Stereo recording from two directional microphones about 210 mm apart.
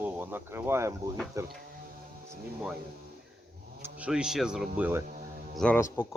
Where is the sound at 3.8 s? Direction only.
5° right (ahead or behind).